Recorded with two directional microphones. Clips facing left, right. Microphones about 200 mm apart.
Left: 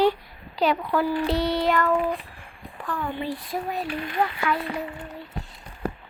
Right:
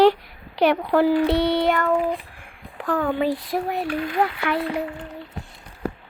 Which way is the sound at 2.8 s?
75° right (ahead or behind).